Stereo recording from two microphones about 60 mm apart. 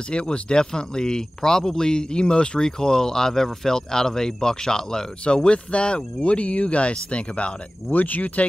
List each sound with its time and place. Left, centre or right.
0.1 s speech: centre